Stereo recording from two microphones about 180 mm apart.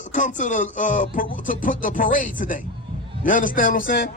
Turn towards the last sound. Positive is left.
turn(degrees=55)  # may be behind; listen again after turning